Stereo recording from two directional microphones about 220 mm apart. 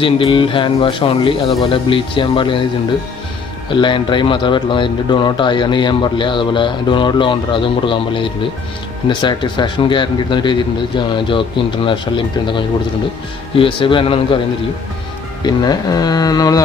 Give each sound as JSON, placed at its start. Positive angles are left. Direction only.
{"t": 0.0, "sound": "speech", "side_deg": 25}
{"t": 3.7, "sound": "speech", "side_deg": 20}
{"t": 13.6, "sound": "speech", "side_deg": 25}
{"t": 15.4, "sound": "speech", "side_deg": 20}